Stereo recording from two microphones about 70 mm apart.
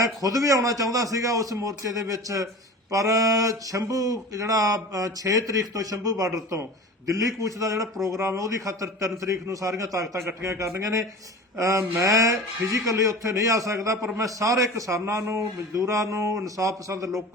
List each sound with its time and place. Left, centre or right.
0.0 s a man's voice: right